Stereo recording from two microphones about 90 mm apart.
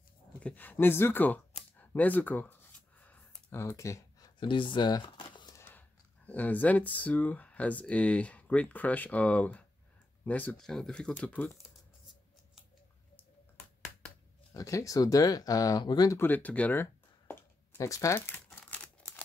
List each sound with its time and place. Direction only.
0.4 s a sound: 15° left (ahead or behind)
3.4 s speech: 20° left (ahead or behind)
3.7 s speech: 35° left (ahead or behind)
4.4 s speech: 65° left (ahead or behind)
5.7 s speech: 20° left (ahead or behind)
10.6 s speech: 5° left (ahead or behind)
14.5 s speech: 40° left (ahead or behind)
16.2 s speech: 20° left (ahead or behind)
16.8 s a sound: 30° left (ahead or behind)
17.8 s crumpling: 35° left (ahead or behind); by 19.2 s 15° left (ahead or behind)